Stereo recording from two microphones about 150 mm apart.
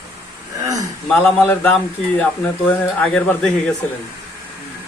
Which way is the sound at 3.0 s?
5° left (ahead or behind).